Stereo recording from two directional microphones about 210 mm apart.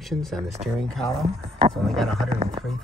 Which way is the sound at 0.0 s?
Centre (ahead or behind).